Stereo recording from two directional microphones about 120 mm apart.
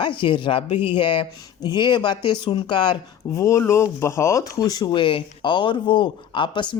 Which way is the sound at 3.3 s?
25° left (ahead or behind).